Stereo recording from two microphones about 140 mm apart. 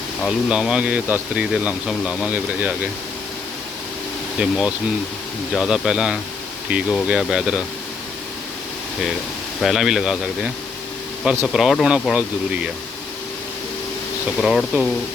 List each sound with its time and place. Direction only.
0.2 s speech: centre (ahead or behind)
4.4 s speech: 5° right (ahead or behind)
9.6 s speech: centre (ahead or behind)
14.4 s speech: centre (ahead or behind)